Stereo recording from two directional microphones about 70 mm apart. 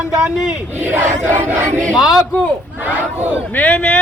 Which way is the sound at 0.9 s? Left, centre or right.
Right.